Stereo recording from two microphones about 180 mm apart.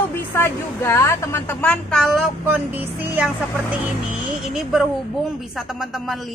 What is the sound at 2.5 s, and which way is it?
Speech, 10° right (ahead or behind).